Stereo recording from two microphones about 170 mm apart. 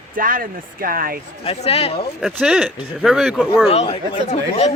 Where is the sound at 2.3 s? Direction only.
5° right (ahead or behind).